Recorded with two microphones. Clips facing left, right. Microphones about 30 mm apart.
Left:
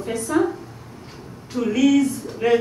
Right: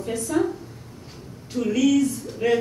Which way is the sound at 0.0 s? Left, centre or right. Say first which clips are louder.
Left 3 dB; centre.